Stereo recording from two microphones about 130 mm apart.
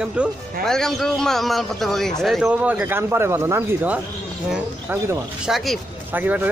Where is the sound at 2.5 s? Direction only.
10° right (ahead or behind).